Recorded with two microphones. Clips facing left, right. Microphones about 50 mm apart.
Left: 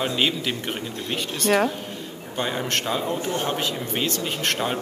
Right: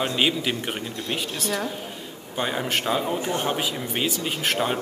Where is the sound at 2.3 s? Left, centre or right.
Centre.